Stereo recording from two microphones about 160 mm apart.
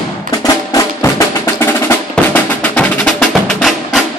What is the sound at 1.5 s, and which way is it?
Music, 10° left (ahead or behind).